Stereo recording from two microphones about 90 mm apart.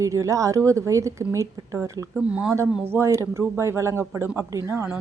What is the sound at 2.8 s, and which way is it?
A woman's voice, 30° right (ahead or behind).